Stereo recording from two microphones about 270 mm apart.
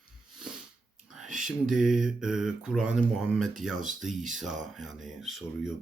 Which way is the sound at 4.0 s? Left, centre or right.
Centre.